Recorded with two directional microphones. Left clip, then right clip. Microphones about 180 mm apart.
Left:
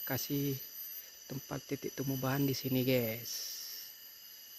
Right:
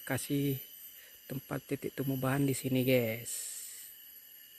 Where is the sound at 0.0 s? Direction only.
25° right (ahead or behind).